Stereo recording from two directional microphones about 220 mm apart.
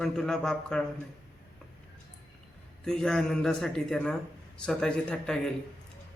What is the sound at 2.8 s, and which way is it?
A man's voice, 5° left (ahead or behind).